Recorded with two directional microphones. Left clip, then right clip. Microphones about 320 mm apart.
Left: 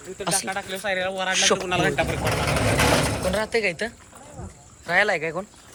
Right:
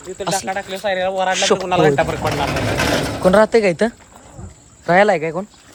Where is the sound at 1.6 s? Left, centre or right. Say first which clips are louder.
Right 8 dB; right.